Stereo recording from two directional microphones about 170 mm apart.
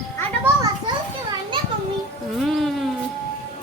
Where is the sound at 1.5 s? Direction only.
30° right (ahead or behind).